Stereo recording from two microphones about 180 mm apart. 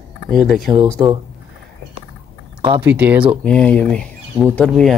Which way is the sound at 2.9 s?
10° right (ahead or behind).